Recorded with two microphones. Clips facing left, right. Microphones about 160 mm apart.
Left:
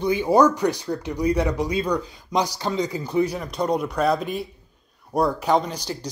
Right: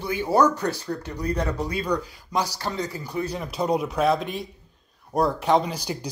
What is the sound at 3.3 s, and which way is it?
Speech, 5° right (ahead or behind).